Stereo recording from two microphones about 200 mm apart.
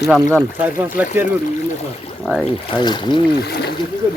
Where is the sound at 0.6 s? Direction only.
10° right (ahead or behind).